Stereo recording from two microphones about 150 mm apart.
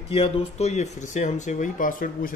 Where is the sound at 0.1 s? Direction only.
40° left (ahead or behind).